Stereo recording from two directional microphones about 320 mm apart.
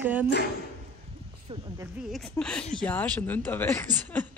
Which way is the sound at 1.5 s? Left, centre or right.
Centre.